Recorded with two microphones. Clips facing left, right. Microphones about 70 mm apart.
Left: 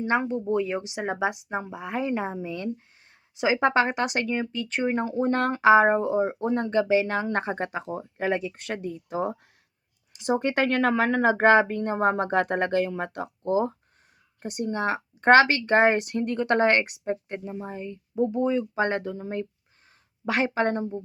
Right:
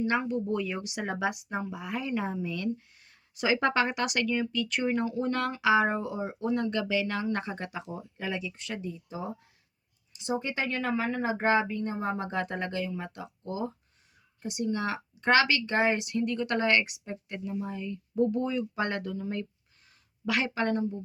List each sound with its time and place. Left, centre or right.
0.0 s speech: left
13.4 s speech: left